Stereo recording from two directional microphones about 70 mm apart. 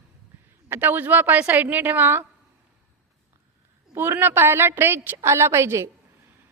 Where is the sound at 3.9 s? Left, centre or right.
Right.